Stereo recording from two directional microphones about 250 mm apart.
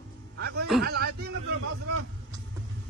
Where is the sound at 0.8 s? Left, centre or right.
Right.